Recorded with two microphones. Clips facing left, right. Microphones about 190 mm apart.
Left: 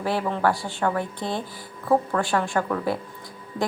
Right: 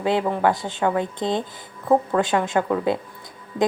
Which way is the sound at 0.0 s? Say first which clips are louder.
Right 3 dB; 20° right (ahead or behind).